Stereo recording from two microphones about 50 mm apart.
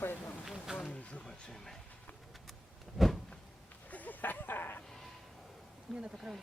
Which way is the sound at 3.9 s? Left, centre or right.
Left.